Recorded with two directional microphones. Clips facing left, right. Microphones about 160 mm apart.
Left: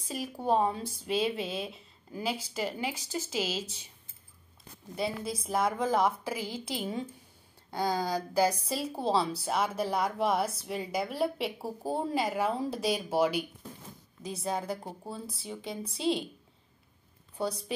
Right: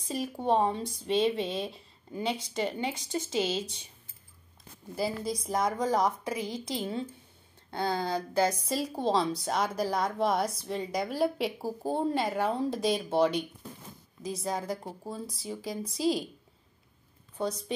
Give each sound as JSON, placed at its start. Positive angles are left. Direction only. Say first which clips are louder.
{"t": 0.1, "sound": "speech", "louder": "right 1 dB", "side_deg": 0}
{"t": 3.3, "sound": "a woman's voice", "louder": "right 4 dB", "side_deg": -30}
{"t": 4.9, "sound": "speech", "louder": "right 2 dB", "side_deg": 0}
{"t": 14.3, "sound": "speech", "louder": "even", "side_deg": 30}
{"t": 14.8, "sound": "speech", "louder": "right 2 dB", "side_deg": 5}
{"t": 15.6, "sound": "a woman's voice", "louder": "right 2 dB", "side_deg": 30}